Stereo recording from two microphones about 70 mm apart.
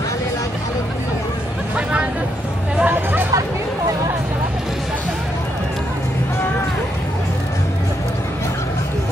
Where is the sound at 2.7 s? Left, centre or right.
Right.